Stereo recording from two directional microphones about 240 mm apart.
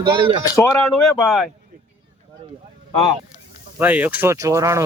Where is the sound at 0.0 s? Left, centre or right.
Right.